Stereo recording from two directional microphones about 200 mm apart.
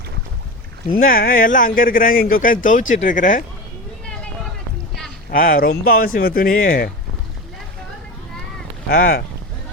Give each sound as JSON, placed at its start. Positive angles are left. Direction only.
{"t": 0.9, "sound": "speech", "side_deg": 45}
{"t": 5.3, "sound": "speech", "side_deg": 45}
{"t": 8.9, "sound": "speech", "side_deg": 50}